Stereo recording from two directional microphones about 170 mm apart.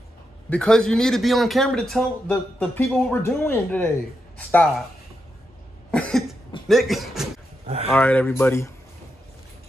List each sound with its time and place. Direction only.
0.5 s a man's voice: 5° left (ahead or behind)
5.9 s cough: 5° left (ahead or behind)
6.7 s a man's voice: centre (ahead or behind)
7.6 s speech: 40° right (ahead or behind)
7.9 s speech: 10° left (ahead or behind)